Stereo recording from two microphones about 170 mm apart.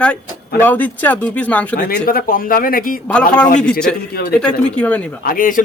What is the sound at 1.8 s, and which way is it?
A man's voice, 65° left (ahead or behind).